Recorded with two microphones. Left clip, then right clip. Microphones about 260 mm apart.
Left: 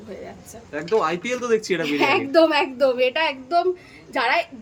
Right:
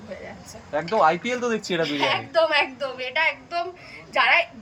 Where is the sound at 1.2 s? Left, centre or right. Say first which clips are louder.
Left 3 dB; left.